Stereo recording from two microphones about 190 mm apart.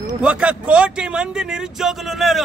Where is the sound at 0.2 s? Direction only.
5° right (ahead or behind).